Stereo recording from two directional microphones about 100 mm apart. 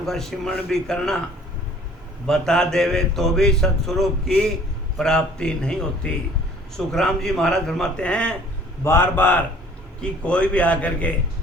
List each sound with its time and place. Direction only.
0.0 s speech: 5° left (ahead or behind)
2.2 s a man's voice: 5° left (ahead or behind)
8.8 s a man's voice: 25° left (ahead or behind)